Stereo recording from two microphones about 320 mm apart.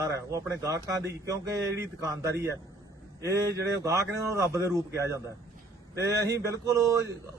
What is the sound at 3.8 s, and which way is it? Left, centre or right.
A man's voice, centre.